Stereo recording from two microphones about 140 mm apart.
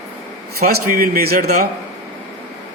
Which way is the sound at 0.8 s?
85° right.